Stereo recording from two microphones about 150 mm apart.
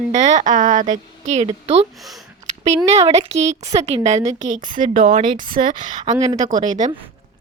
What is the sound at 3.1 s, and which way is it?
Speech, 45° right (ahead or behind).